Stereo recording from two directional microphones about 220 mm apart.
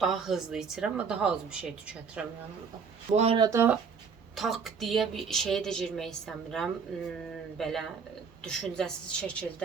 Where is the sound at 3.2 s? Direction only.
25° right (ahead or behind).